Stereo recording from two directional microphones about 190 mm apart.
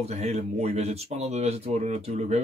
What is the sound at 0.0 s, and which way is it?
Speech, 35° right (ahead or behind).